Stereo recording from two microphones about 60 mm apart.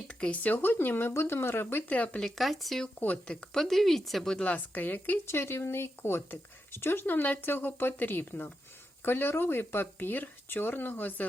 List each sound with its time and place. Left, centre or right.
0.2 s speech: centre
0.5 s speech: left
1.9 s speech: left
2.2 s speech: centre
4.5 s speech: left
5.2 s speech: left